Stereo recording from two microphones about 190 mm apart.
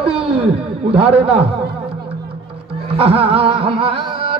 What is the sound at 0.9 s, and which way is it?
Speech, 30° right (ahead or behind).